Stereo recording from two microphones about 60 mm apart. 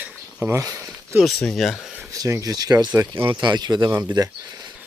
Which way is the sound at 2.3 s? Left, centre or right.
Right.